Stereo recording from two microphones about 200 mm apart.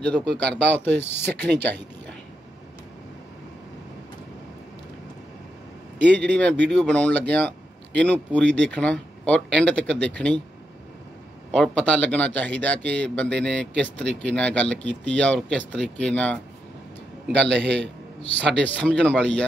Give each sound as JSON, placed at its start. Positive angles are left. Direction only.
{"t": 0.0, "sound": "speech", "side_deg": 5}
{"t": 6.3, "sound": "speech", "side_deg": 5}
{"t": 11.5, "sound": "speech", "side_deg": 5}
{"t": 17.5, "sound": "a man's voice", "side_deg": -60}
{"t": 18.4, "sound": "speech", "side_deg": 5}